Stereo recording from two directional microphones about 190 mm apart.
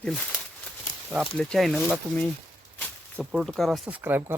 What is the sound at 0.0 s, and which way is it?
Speech, 5° left (ahead or behind).